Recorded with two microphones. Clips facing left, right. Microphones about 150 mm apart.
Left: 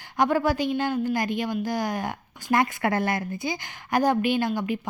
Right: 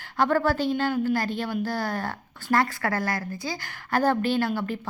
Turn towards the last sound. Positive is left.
turn(degrees=15)  # may be behind; listen again after turning